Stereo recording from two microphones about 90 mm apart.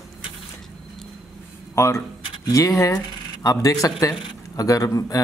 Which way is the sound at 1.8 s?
30° left (ahead or behind).